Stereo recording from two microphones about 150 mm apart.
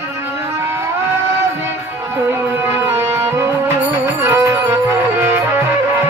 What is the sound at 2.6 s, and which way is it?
Music, 15° right (ahead or behind).